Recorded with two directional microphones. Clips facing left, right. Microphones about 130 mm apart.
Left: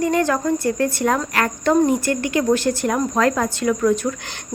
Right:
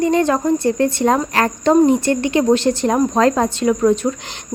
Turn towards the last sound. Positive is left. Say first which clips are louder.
# right 3 dB
turn(degrees=-25)  # may be behind; listen again after turning